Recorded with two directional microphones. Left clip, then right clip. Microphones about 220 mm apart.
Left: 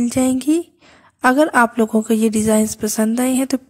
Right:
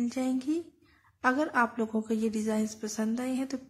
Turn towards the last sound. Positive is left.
turn(degrees=40)  # may be behind; listen again after turning